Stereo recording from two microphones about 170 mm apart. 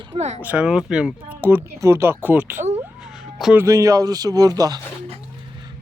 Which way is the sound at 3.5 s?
15° right (ahead or behind).